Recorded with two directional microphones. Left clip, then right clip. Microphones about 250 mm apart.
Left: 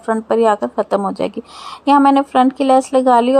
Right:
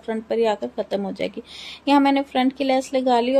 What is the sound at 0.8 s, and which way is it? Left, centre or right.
Speech, left.